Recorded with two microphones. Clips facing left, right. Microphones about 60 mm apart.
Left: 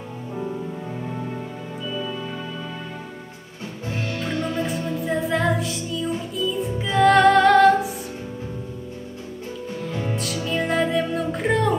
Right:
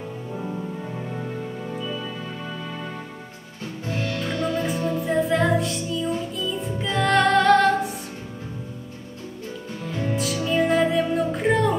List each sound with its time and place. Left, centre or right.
4.1 s music: left
4.6 s music: centre
10.1 s music: centre